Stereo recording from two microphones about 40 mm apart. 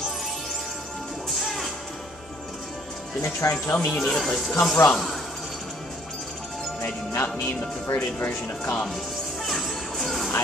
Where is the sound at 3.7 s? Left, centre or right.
Left.